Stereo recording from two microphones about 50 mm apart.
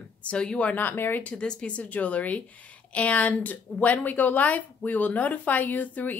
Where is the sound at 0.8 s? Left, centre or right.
Left.